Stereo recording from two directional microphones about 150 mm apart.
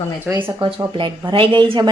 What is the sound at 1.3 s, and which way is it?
Speech, 35° right (ahead or behind).